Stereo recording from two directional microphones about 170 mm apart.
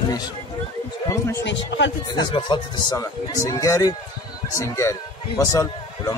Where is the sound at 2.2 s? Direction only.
30° left (ahead or behind).